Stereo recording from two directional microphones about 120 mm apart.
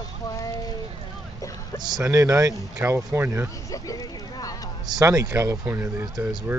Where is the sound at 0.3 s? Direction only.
30° left (ahead or behind).